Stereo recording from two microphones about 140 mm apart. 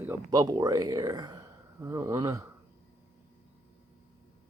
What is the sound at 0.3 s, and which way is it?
Speech, 30° right (ahead or behind).